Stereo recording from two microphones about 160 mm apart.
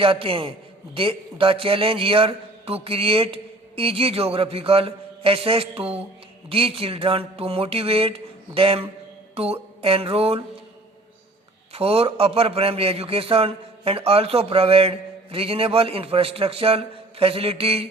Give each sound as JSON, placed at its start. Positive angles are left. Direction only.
{"t": 0.0, "sound": "a man's voice", "side_deg": -35}
{"t": 9.3, "sound": "mantra", "side_deg": -40}
{"t": 11.7, "sound": "a man's voice", "side_deg": -40}